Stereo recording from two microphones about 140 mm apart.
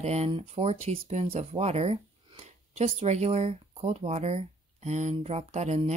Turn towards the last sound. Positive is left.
turn(degrees=-50)  # may be behind; listen again after turning